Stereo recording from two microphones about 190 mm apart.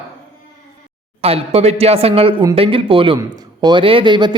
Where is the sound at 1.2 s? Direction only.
30° right (ahead or behind).